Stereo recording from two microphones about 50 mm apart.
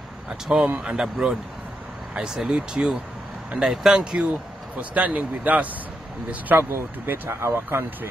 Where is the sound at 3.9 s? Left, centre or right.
Centre.